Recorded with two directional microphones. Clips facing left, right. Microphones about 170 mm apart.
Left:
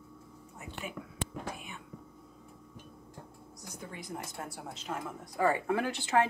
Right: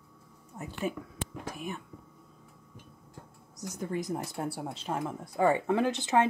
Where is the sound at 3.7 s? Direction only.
40° right (ahead or behind).